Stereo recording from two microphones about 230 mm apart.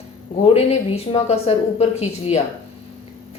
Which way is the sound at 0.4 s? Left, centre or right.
Left.